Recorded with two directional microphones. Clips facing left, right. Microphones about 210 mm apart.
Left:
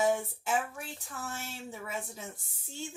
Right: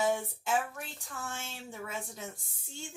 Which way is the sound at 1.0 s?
5° left (ahead or behind).